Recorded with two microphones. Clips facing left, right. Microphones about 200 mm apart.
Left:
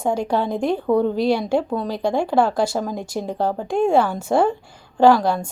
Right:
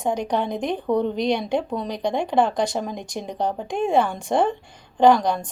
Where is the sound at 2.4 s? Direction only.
5° left (ahead or behind).